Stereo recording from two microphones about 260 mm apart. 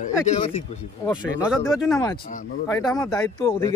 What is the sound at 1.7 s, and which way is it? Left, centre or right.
Speech, centre.